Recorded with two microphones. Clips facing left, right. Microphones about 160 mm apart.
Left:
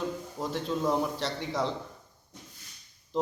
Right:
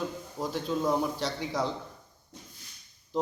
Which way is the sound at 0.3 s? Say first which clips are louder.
Right 2 dB; centre (ahead or behind).